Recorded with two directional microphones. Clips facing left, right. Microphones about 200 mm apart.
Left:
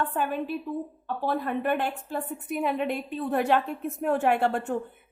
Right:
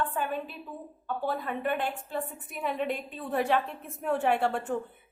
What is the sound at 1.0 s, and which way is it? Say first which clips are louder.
Speech: left 2 dB; 45° left (ahead or behind).